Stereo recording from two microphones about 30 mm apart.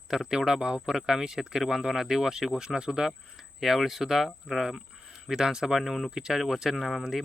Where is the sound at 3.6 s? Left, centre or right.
Centre.